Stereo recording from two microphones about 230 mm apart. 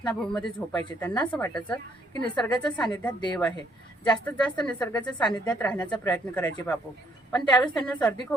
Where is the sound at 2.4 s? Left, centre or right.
Centre.